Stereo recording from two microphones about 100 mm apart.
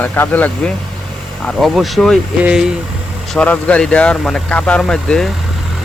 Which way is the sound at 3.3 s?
10° left (ahead or behind).